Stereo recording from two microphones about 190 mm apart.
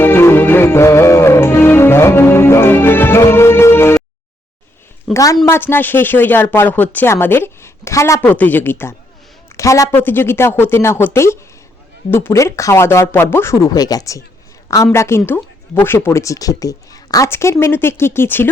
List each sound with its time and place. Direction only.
0.0 s music: 10° left (ahead or behind)
5.1 s speech: 15° left (ahead or behind)